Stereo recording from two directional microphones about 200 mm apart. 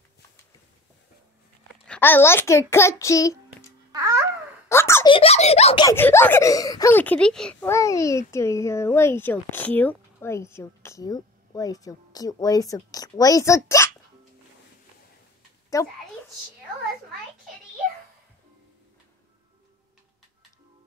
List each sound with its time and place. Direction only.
1.7 s a child's voice: 10° left (ahead or behind)
3.9 s babbling: 15° right (ahead or behind)
4.6 s a sound: 15° left (ahead or behind)
5.0 s speech: 25° left (ahead or behind)
5.9 s a child's voice: 10° left (ahead or behind)
15.7 s a child's voice: 15° left (ahead or behind)